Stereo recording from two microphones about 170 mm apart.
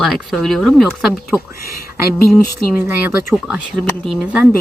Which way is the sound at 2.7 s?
15° right (ahead or behind).